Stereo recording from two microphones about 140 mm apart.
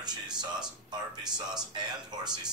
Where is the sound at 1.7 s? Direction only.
30° right (ahead or behind).